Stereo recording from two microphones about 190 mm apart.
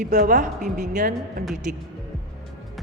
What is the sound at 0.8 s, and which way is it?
Speech, 40° right (ahead or behind).